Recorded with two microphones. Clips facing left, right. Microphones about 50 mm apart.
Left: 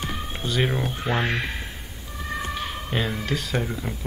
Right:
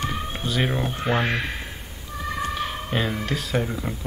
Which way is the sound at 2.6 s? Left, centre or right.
Centre.